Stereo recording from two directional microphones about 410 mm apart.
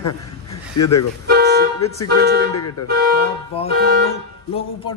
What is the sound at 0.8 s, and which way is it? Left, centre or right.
Speech, left.